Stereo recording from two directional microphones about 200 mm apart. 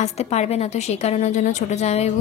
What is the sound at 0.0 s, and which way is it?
A woman's voice, 30° left (ahead or behind).